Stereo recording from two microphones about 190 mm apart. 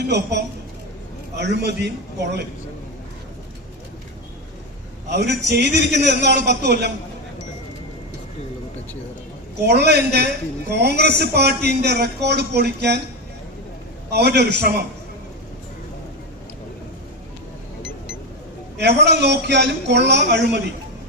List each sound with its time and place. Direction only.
0.0 s a man's voice: 65° right (ahead or behind)
5.0 s a man's voice: 65° right (ahead or behind)
9.6 s a man's voice: 60° right (ahead or behind)
14.1 s a man's voice: 60° right (ahead or behind)
18.8 s a man's voice: 60° right (ahead or behind)